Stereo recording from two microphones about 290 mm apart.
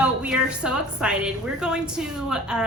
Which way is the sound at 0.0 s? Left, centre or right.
Centre.